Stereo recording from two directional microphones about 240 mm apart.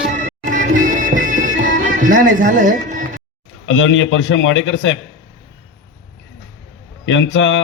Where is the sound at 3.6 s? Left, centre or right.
Left.